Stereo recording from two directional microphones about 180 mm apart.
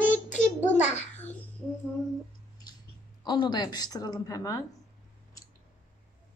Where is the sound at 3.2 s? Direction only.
25° left (ahead or behind).